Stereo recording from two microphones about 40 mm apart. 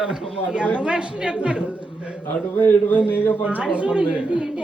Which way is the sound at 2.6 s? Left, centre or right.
Left.